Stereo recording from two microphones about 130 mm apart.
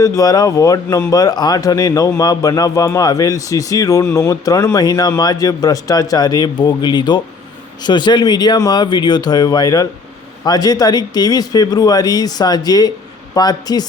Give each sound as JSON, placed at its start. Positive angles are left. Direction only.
{"t": 0.0, "sound": "a man's voice", "side_deg": 25}